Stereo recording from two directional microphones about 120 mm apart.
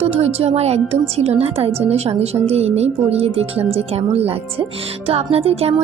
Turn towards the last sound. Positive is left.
turn(degrees=-55)  # may be behind; listen again after turning